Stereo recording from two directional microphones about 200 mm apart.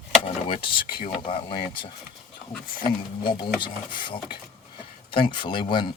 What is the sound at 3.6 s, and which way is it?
Speech, 25° left (ahead or behind).